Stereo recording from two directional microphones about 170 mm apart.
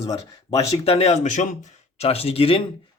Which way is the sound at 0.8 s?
35° left (ahead or behind).